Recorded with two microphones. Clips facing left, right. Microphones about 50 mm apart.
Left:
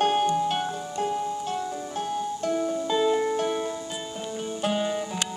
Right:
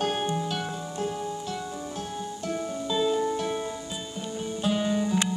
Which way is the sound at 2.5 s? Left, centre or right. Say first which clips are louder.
Left 3 dB; centre.